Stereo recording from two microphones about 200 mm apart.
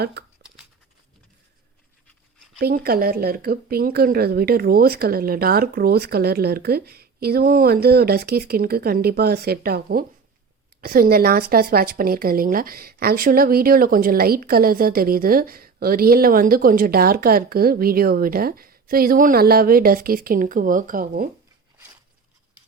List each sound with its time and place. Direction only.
0.0 s speech: 55° right (ahead or behind)
0.4 s a sound: 5° right (ahead or behind)
2.6 s speech: 50° right (ahead or behind)